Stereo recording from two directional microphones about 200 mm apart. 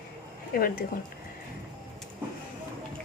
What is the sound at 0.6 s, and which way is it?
Speech, 45° left (ahead or behind).